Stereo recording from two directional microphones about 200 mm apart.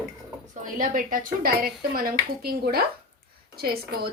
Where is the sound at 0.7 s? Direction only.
40° right (ahead or behind).